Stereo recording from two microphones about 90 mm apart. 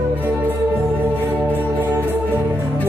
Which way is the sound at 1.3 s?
25° right (ahead or behind).